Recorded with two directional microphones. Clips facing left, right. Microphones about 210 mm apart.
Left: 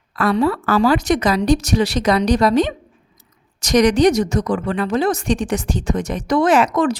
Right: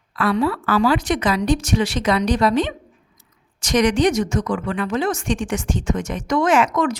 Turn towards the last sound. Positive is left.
turn(degrees=35)  # may be behind; listen again after turning